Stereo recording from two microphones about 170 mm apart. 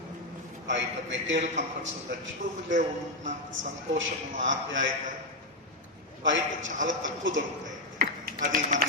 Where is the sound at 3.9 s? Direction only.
90° right.